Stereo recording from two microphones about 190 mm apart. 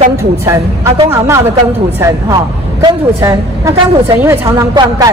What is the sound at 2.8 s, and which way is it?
A woman's voice, 15° right (ahead or behind).